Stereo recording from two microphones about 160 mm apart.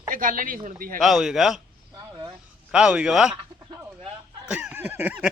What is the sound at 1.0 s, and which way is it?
Speech, 5° right (ahead or behind).